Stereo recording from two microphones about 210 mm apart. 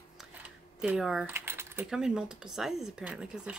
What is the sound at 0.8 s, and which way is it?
Speech, 5° right (ahead or behind).